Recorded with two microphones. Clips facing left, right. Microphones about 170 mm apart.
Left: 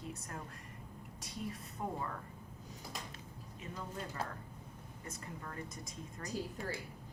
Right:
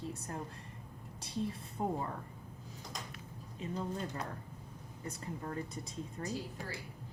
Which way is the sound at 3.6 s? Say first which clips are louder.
Right 6 dB; 30° right (ahead or behind).